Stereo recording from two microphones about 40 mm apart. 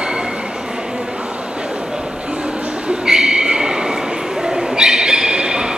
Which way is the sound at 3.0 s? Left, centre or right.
Centre.